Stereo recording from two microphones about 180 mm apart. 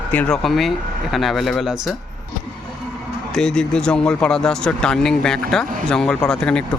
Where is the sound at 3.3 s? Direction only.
5° left (ahead or behind).